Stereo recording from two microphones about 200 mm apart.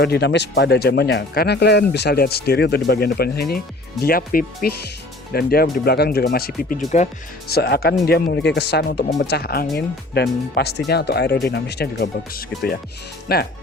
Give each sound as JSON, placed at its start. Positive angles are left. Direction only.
{"t": 0.0, "sound": "speech", "side_deg": 55}
{"t": 7.5, "sound": "speech", "side_deg": 50}